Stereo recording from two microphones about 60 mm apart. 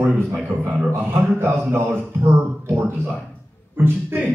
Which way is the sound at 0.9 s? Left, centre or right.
Right.